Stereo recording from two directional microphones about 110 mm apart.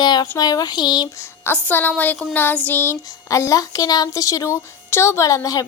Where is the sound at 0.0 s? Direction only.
40° left (ahead or behind).